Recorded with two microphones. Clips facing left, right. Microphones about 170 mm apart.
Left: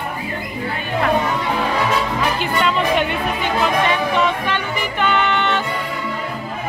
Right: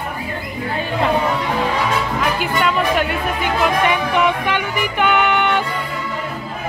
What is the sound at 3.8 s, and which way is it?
Speech, 15° right (ahead or behind).